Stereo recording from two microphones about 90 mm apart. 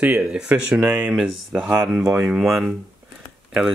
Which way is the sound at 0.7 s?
25° right (ahead or behind).